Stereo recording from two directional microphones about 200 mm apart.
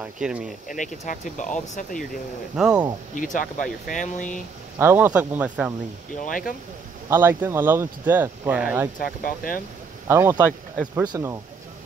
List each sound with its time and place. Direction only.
0.0 s speech: 5° right (ahead or behind)
0.7 s speech: 40° left (ahead or behind)
2.5 s speech: 5° right (ahead or behind)
3.8 s speech: 40° left (ahead or behind)
4.7 s speech: 10° right (ahead or behind)
6.1 s speech: 40° left (ahead or behind)
7.1 s speech: 10° right (ahead or behind)
9.0 s speech: 45° left (ahead or behind)
10.0 s speech: 15° right (ahead or behind)